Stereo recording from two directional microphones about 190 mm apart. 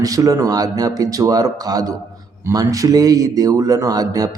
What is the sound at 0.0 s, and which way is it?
Speech, 20° right (ahead or behind).